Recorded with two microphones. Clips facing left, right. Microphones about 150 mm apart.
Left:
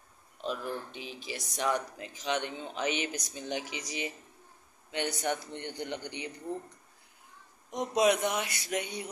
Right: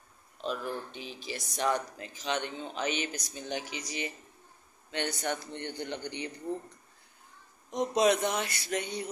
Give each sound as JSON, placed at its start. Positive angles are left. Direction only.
{"t": 0.5, "sound": "speech", "side_deg": 10}
{"t": 7.7, "sound": "speech", "side_deg": 10}